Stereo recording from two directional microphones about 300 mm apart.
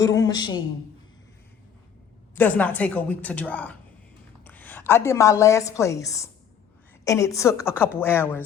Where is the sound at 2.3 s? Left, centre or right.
Centre.